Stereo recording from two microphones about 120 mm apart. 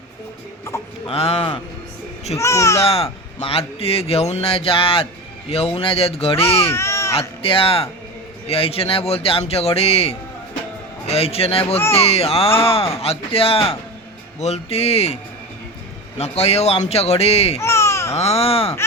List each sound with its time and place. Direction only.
1.0 s speech: 50° left (ahead or behind)
2.4 s speech: 25° left (ahead or behind)
2.8 s speech: 55° left (ahead or behind)
6.7 s baby cry: 25° left (ahead or behind)
7.2 s speech: 50° left (ahead or behind)
14.3 s speech: 65° left (ahead or behind)
17.6 s baby cry: 25° left (ahead or behind)
18.2 s speech: 60° left (ahead or behind)